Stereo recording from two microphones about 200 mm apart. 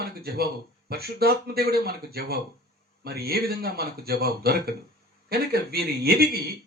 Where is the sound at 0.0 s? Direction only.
50° right (ahead or behind).